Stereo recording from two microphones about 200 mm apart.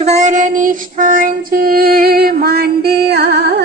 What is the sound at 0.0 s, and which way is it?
Female singing, 35° right (ahead or behind).